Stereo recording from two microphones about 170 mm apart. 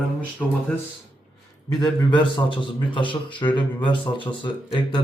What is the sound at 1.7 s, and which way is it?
A man's voice, 20° left (ahead or behind).